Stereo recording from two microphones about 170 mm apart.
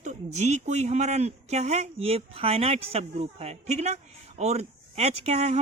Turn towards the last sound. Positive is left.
turn(degrees=-40)  # may be behind; listen again after turning